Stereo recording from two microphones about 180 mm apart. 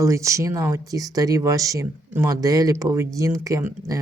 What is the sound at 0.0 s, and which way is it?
Speech, 15° right (ahead or behind).